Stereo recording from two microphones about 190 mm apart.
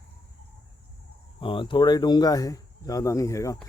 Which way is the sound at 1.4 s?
25° left (ahead or behind).